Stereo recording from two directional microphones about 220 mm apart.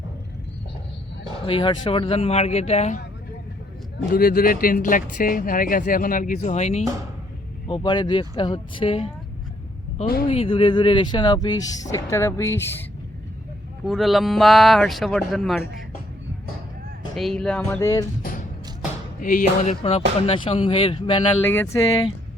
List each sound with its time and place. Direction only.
1.5 s speech: 25° left (ahead or behind)
4.1 s speech: 40° left (ahead or behind)
7.7 s speech: 20° left (ahead or behind)
10.2 s speech: 25° left (ahead or behind)
13.8 s speech: centre (ahead or behind)
17.2 s speech: centre (ahead or behind)
18.2 s music: 40° left (ahead or behind)
19.2 s speech: 40° left (ahead or behind); by 21.2 s 25° left (ahead or behind)
21.4 s speech: 10° left (ahead or behind)